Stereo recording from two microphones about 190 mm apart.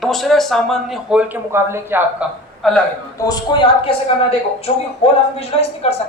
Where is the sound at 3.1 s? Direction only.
20° left (ahead or behind).